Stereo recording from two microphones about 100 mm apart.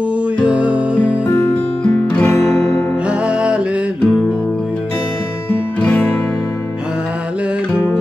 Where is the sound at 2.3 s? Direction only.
25° left (ahead or behind).